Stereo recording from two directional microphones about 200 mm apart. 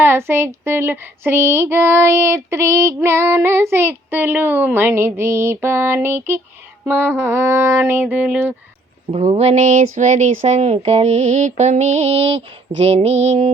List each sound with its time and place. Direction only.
0.0 s female singing: 10° right (ahead or behind)
9.1 s speech: 30° right (ahead or behind)